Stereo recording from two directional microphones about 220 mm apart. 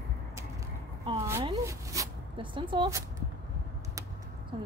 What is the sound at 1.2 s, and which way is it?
Speech, 15° right (ahead or behind).